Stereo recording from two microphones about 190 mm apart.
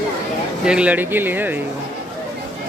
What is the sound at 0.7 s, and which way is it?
Speech, 5° right (ahead or behind).